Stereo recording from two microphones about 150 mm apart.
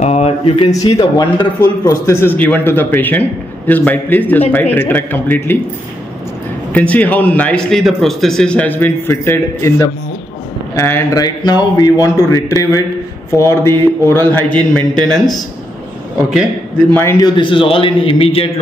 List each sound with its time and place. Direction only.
0.0 s a sound: 45° left (ahead or behind)
0.8 s a man's voice: 30° left (ahead or behind)
1.6 s a man's voice: 20° left (ahead or behind)
6.7 s a man's voice: 10° left (ahead or behind)
14.7 s speech: 5° left (ahead or behind)
16.9 s a man's voice: 15° left (ahead or behind)
17.4 s a man's voice: 35° left (ahead or behind)